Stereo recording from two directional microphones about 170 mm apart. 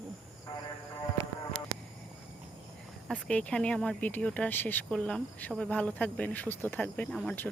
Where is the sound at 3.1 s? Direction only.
5° left (ahead or behind).